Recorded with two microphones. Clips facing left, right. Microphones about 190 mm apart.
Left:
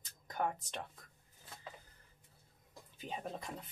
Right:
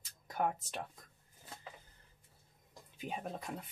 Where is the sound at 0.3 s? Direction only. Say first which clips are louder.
Right 2 dB; 5° right (ahead or behind).